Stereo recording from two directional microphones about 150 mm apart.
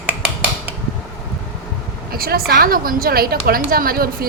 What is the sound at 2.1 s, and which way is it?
A woman's voice, 85° right.